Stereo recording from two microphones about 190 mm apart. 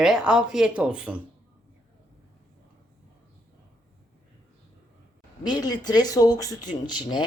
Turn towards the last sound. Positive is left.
turn(degrees=20)  # may be behind; listen again after turning